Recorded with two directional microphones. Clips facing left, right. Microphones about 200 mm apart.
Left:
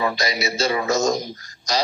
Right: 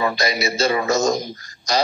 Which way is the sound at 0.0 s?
55° right (ahead or behind).